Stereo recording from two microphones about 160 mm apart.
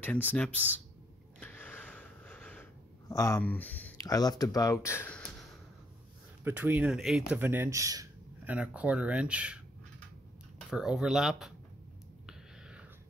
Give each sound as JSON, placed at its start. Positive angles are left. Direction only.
{"t": 0.0, "sound": "speech", "side_deg": 10}
{"t": 1.4, "sound": "a sound", "side_deg": 10}
{"t": 3.1, "sound": "speech", "side_deg": 20}
{"t": 4.1, "sound": "speech", "side_deg": 25}
{"t": 6.4, "sound": "speech", "side_deg": -10}
{"t": 8.5, "sound": "speech", "side_deg": -10}
{"t": 10.7, "sound": "speech", "side_deg": -5}
{"t": 12.3, "sound": "a sound", "side_deg": -5}